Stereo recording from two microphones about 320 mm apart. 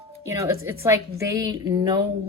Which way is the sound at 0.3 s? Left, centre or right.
Centre.